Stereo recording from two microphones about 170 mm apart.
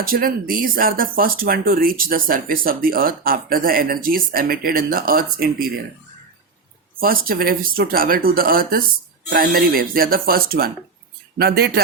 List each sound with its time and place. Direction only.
0.0 s speech: 60° right (ahead or behind)
7.0 s speech: 60° right (ahead or behind)